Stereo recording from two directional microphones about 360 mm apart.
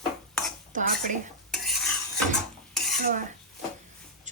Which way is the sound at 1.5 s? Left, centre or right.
Centre.